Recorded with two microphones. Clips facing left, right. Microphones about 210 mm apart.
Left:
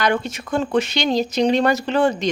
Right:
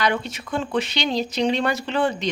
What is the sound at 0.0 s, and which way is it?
Speech, 45° left (ahead or behind).